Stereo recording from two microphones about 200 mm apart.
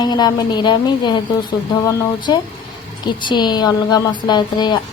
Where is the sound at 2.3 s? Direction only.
20° left (ahead or behind).